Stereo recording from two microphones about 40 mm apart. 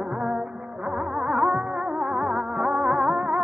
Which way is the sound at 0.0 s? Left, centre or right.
Centre.